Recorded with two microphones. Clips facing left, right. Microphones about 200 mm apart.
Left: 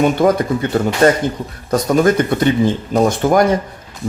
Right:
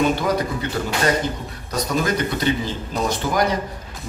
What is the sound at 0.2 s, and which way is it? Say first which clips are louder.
Speech: left 9 dB; 50° left (ahead or behind).